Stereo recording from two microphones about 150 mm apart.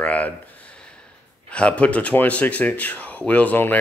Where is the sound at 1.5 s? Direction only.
10° left (ahead or behind).